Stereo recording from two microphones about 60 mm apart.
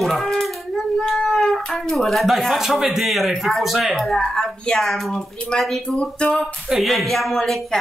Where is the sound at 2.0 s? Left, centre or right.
Centre.